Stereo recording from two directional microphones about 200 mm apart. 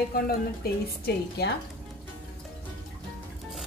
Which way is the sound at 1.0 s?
55° left (ahead or behind).